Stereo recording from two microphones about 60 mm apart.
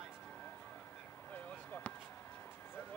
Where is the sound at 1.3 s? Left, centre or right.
Left.